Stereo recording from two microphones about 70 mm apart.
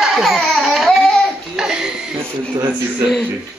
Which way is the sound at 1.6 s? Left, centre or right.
Centre.